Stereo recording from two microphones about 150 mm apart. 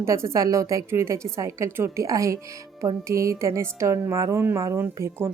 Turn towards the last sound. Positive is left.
turn(degrees=-15)  # may be behind; listen again after turning